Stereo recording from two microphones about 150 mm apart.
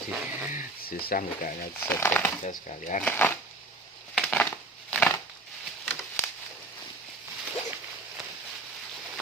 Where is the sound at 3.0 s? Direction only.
15° left (ahead or behind).